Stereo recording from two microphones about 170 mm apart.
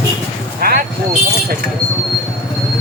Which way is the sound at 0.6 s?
60° right (ahead or behind).